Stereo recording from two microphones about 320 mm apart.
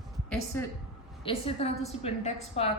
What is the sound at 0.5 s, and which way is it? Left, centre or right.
A woman's voice, centre.